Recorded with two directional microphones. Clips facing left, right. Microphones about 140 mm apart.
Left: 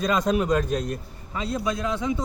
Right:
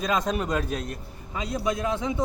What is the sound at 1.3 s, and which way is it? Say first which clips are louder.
Speech: left 1 dB; 15° right (ahead or behind).